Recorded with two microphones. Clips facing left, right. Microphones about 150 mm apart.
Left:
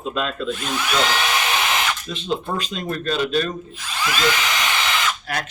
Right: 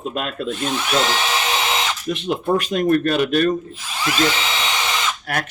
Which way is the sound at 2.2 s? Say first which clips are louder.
Right 4 dB; 50° right (ahead or behind).